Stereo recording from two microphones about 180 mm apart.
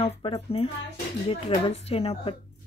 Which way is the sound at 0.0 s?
30° left (ahead or behind).